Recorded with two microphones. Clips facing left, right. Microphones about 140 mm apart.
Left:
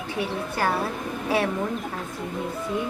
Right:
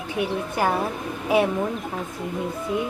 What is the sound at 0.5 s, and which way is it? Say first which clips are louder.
A woman's voice: right 2 dB; 15° right (ahead or behind).